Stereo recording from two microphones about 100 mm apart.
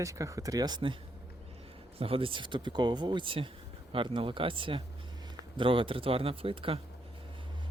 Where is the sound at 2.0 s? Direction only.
70° right (ahead or behind).